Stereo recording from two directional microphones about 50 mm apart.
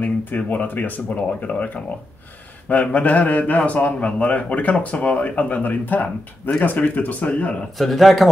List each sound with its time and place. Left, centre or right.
0.0 s a sound: left
0.5 s a man's voice: left
7.7 s a man's voice: centre